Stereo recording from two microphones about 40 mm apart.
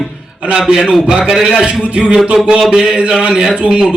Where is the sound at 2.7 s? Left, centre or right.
Right.